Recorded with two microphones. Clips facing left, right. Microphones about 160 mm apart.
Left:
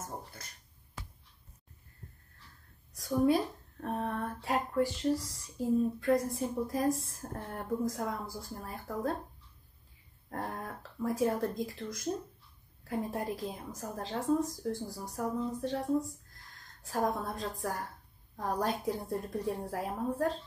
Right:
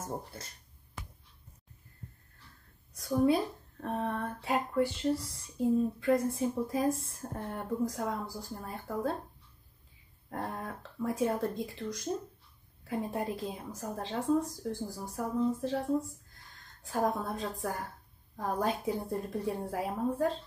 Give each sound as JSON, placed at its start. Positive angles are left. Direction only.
{"t": 0.0, "sound": "speech", "side_deg": -30}
{"t": 2.9, "sound": "speech", "side_deg": 0}
{"t": 10.3, "sound": "speech", "side_deg": 0}